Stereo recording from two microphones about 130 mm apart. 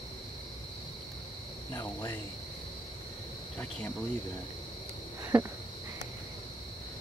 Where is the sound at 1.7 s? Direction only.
15° left (ahead or behind).